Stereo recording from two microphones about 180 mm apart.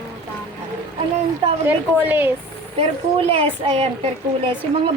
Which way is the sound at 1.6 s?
10° right (ahead or behind).